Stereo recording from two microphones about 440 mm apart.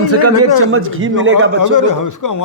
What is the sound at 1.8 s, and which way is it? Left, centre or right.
Speech, left.